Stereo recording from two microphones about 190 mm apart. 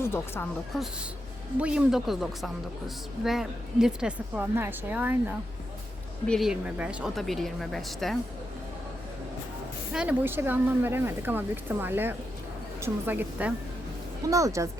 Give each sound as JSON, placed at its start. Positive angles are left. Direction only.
{"t": 0.0, "sound": "a woman's voice", "side_deg": 15}
{"t": 1.5, "sound": "a woman's voice", "side_deg": -5}
{"t": 9.9, "sound": "speech", "side_deg": -5}